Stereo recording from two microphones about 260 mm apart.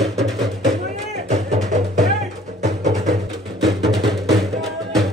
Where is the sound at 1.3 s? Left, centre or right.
Right.